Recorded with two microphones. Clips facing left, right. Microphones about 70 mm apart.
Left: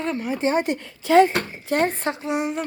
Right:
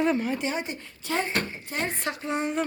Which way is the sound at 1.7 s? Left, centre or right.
Left.